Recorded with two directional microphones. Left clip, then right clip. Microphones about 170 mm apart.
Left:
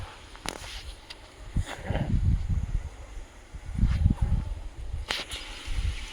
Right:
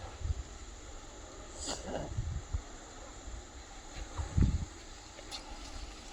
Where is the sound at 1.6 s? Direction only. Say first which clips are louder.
Left 4 dB; 35° left (ahead or behind).